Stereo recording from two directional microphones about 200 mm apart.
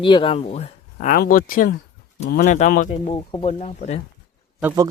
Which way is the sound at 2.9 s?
25° left (ahead or behind).